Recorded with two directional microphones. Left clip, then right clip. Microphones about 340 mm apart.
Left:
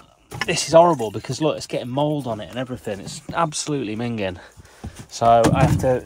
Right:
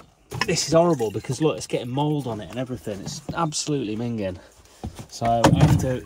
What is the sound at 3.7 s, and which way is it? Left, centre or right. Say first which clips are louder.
Speech: left 1 dB; centre.